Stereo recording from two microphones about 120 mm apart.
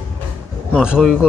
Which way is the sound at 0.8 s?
5° right (ahead or behind).